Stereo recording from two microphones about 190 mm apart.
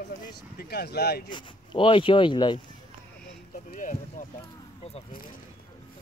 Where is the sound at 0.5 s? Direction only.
55° left (ahead or behind).